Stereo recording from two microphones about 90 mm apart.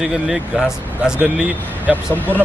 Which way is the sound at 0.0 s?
10° right (ahead or behind).